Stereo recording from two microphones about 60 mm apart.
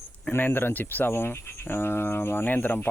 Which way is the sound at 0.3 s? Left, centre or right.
Left.